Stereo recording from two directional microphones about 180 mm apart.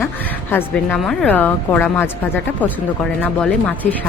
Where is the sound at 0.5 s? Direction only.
5° left (ahead or behind).